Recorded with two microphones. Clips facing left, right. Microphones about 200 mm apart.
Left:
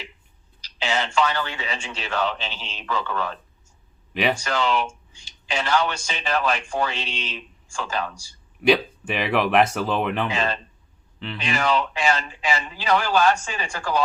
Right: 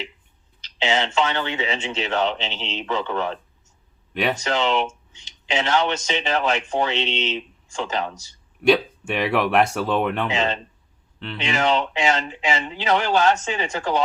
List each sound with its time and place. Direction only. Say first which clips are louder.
0.8 s speech: right 1 dB; 25° right (ahead or behind)
4.1 s speech: even; 5° left (ahead or behind)
4.4 s a man's voice: right 2 dB; 25° right (ahead or behind)
8.6 s speech: right 1 dB; 5° left (ahead or behind)
10.2 s speech: right 2 dB; 25° right (ahead or behind)